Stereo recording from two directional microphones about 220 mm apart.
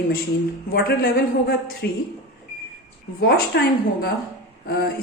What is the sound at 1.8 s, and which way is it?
Speech, 50° left (ahead or behind).